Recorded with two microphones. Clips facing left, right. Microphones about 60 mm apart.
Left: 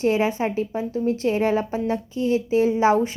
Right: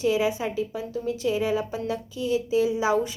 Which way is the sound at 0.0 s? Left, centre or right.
Left.